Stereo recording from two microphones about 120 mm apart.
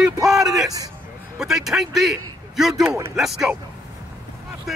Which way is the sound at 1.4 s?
5° right (ahead or behind).